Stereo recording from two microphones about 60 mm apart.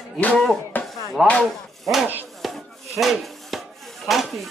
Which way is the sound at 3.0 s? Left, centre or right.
Centre.